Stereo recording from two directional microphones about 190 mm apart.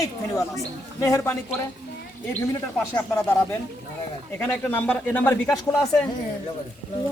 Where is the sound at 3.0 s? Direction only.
10° left (ahead or behind).